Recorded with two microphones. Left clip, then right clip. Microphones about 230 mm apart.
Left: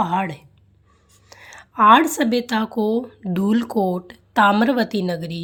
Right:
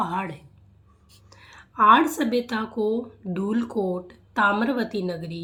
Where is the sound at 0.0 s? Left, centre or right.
Left.